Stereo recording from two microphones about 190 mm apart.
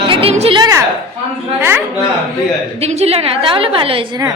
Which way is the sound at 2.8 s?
35° right (ahead or behind).